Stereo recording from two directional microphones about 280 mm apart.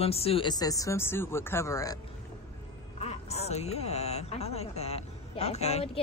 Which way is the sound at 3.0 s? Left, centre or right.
Left.